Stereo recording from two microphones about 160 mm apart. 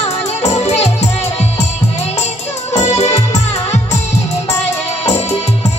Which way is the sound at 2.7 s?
45° left (ahead or behind).